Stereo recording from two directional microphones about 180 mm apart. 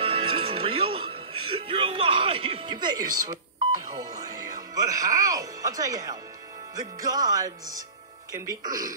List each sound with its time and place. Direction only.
0.0 s speech: 30° right (ahead or behind)
6.7 s music: 20° right (ahead or behind)